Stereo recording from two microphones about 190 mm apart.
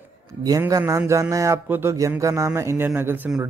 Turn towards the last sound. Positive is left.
turn(degrees=-10)  # may be behind; listen again after turning